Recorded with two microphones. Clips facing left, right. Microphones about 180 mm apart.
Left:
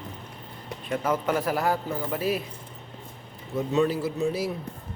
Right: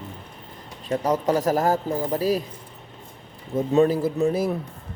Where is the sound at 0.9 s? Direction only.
35° right (ahead or behind).